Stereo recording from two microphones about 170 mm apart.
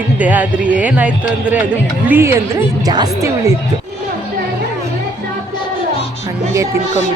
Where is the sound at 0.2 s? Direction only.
10° right (ahead or behind).